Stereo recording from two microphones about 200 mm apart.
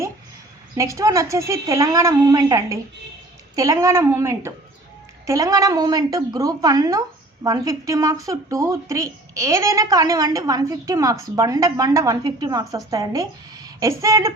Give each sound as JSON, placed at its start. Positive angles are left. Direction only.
{"t": 0.8, "sound": "speech", "side_deg": -15}